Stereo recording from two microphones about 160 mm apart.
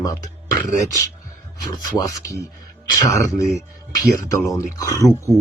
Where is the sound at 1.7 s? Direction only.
20° left (ahead or behind).